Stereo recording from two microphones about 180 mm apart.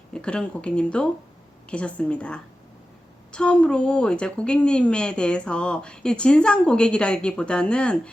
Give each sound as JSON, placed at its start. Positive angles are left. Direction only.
{"t": 0.1, "sound": "a woman's voice", "side_deg": 5}